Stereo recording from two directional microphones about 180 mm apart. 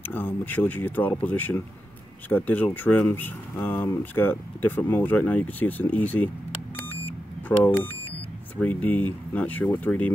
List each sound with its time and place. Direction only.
0.1 s speech: 10° left (ahead or behind)
7.4 s speech: 10° left (ahead or behind)